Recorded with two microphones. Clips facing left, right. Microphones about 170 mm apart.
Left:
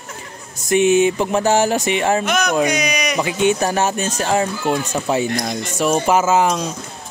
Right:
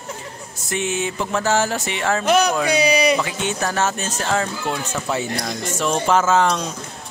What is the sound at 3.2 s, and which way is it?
Speech, 15° left (ahead or behind).